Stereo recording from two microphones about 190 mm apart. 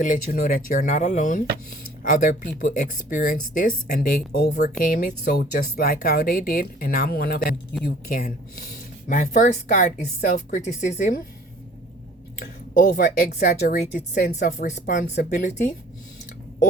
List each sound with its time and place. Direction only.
0.0 s speech: 40° left (ahead or behind); by 4.7 s 60° left (ahead or behind)
4.8 s speech: 50° left (ahead or behind)
12.4 s speech: 45° left (ahead or behind)
13.4 s speech: 60° left (ahead or behind); by 15.7 s 40° left (ahead or behind)